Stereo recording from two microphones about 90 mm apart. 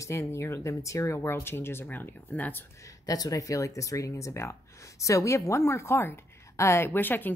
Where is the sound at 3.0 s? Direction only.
40° left (ahead or behind).